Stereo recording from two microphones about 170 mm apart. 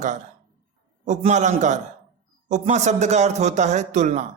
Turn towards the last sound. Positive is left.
turn(degrees=-45)  # may be behind; listen again after turning